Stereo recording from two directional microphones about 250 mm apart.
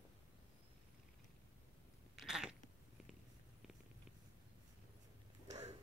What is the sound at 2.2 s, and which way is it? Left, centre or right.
Cat, centre.